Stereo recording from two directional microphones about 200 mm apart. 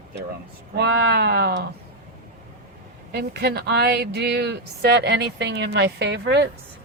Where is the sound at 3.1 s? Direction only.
55° right (ahead or behind).